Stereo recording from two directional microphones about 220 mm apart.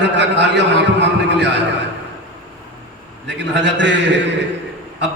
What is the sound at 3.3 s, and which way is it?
Speech, 50° right (ahead or behind).